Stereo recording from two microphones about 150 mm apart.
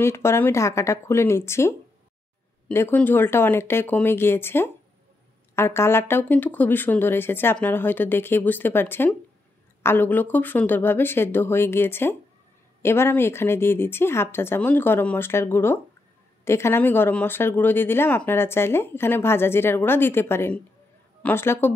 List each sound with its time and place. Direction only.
0.0 s speech: 15° left (ahead or behind)